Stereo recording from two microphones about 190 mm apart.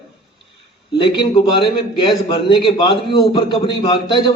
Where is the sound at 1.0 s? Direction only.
25° left (ahead or behind).